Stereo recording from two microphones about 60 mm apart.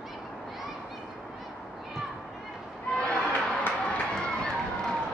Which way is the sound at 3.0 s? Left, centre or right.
Centre.